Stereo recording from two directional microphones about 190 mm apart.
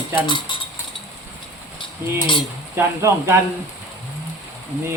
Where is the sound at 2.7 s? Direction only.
10° right (ahead or behind).